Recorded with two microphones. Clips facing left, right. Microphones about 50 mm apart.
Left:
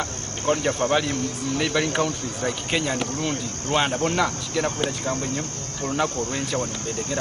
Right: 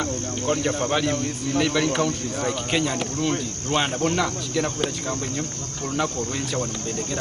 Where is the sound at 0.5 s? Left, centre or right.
Centre.